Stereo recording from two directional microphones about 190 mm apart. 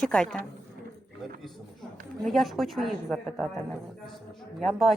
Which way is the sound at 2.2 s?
Centre (ahead or behind).